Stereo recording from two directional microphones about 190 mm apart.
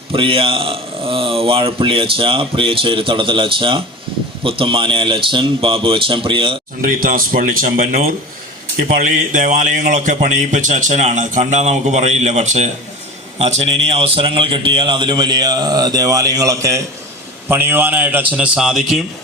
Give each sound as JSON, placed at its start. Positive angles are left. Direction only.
{"t": 0.1, "sound": "speech", "side_deg": -30}
{"t": 6.8, "sound": "a man's voice", "side_deg": -45}